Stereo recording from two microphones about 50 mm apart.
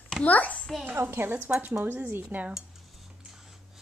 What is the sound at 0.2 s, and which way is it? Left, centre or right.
Speech, left.